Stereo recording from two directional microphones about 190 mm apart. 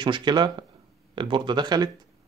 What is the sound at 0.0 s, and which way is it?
Speech, 25° right (ahead or behind).